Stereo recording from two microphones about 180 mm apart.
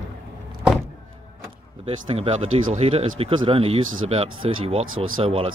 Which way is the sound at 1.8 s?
35° right (ahead or behind).